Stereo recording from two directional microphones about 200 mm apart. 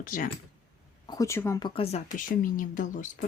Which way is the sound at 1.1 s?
15° left (ahead or behind).